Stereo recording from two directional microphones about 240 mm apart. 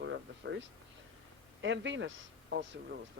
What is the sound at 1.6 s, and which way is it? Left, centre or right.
A man's voice, right.